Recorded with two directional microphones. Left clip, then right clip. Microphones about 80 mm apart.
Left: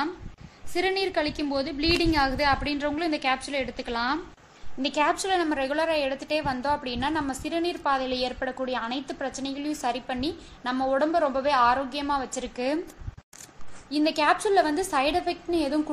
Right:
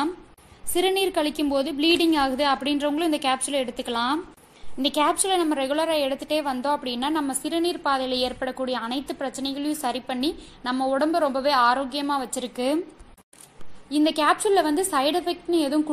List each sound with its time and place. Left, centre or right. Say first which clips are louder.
0.7 s a woman's voice: right 3 dB; right
13.8 s a woman's voice: right 2 dB; right